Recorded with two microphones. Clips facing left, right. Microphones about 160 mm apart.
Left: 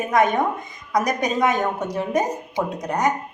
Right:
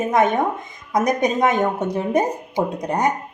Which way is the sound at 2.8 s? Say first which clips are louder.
Even; 25° right (ahead or behind).